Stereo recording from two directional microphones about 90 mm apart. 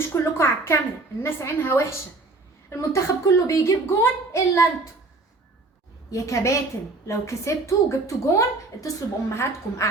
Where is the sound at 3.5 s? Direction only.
35° left (ahead or behind).